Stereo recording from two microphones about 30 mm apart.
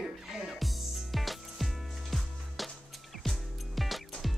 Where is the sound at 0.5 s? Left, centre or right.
Centre.